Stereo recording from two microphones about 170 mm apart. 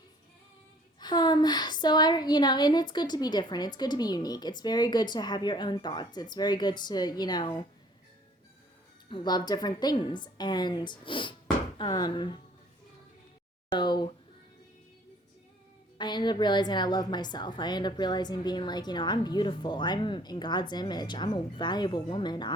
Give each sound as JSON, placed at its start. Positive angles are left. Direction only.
{"t": 0.9, "sound": "speech", "side_deg": 25}
{"t": 9.0, "sound": "speech", "side_deg": 25}
{"t": 13.7, "sound": "speech", "side_deg": 25}
{"t": 16.0, "sound": "speech", "side_deg": 25}